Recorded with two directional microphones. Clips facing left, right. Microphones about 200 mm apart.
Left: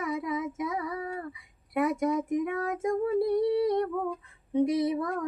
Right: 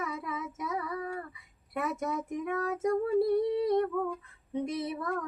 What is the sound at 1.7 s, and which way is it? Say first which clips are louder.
Child singing: left 6 dB; 10° left (ahead or behind).